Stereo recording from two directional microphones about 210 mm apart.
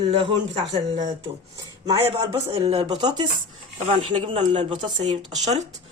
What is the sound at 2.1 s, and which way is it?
Speech, 30° right (ahead or behind).